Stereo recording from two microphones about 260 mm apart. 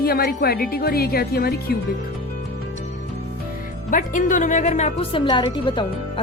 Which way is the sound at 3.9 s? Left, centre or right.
Left.